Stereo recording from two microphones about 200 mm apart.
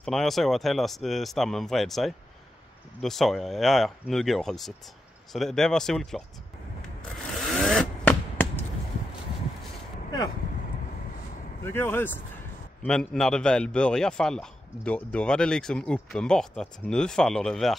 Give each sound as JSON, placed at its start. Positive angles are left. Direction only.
{"t": 0.0, "sound": "a man's voice", "side_deg": 0}
{"t": 7.3, "sound": "a sound", "side_deg": 0}
{"t": 11.6, "sound": "a man's voice", "side_deg": 10}